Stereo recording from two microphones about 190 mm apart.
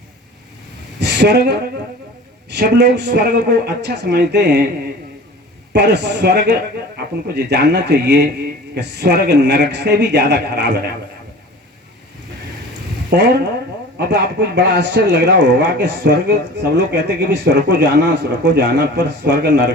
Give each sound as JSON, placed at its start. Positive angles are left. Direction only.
{"t": 0.9, "sound": "speech", "side_deg": -60}
{"t": 5.7, "sound": "speech", "side_deg": -65}
{"t": 13.1, "sound": "speech", "side_deg": -60}